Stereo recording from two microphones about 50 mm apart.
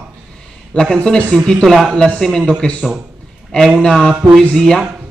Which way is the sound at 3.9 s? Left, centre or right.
Centre.